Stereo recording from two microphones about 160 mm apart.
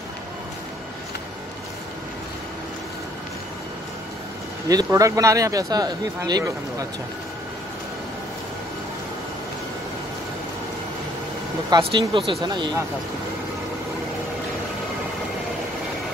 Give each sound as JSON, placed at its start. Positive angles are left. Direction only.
{"t": 4.6, "sound": "speech", "side_deg": -20}
{"t": 11.8, "sound": "speech", "side_deg": -30}